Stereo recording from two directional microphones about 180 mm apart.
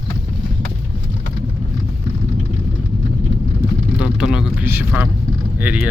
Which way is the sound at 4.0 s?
5° right (ahead or behind).